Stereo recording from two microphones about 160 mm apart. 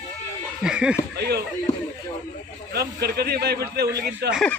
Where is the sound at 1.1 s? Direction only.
90° right.